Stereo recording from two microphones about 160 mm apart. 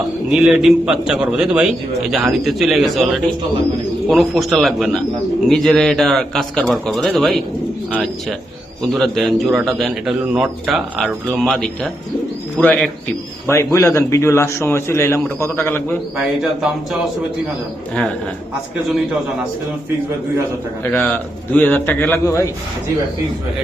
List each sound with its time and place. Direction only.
0.3 s a man's voice: centre (ahead or behind)
4.1 s a man's voice: centre (ahead or behind)
13.5 s a man's voice: 15° left (ahead or behind)
16.1 s a man's voice: 5° right (ahead or behind)
20.9 s a man's voice: 10° left (ahead or behind)